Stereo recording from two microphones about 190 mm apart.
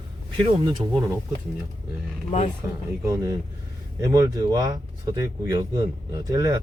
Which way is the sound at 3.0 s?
15° right (ahead or behind).